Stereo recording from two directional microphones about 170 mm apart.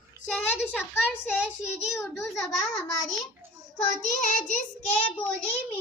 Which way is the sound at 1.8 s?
Centre (ahead or behind).